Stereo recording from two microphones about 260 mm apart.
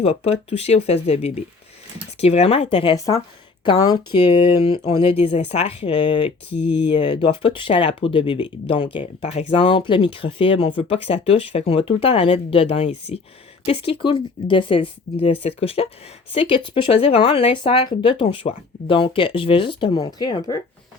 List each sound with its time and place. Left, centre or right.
0.0 s speech: left
6.5 s speech: left
6.9 s speech: centre